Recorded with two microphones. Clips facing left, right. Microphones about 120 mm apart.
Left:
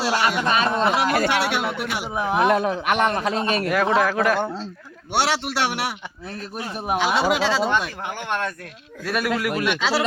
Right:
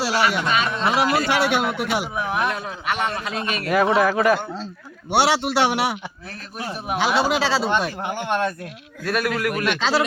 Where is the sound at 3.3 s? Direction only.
35° left (ahead or behind).